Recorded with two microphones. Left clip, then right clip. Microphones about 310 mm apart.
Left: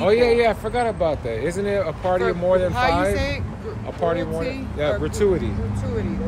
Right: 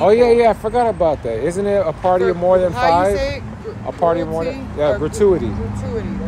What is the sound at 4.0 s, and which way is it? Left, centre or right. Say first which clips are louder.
Speech: right 6 dB; centre.